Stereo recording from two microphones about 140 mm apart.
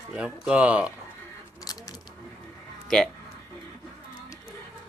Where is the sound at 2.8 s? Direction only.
Centre (ahead or behind).